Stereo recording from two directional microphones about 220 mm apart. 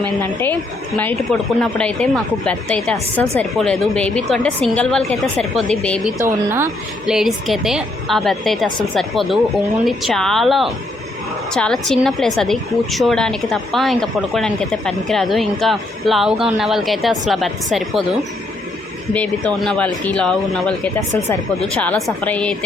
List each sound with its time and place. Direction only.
0.0 s a woman's voice: 10° left (ahead or behind)
6.1 s speech: 10° right (ahead or behind)
7.1 s a woman's voice: centre (ahead or behind)